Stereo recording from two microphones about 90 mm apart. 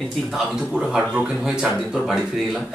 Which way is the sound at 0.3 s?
5° right (ahead or behind).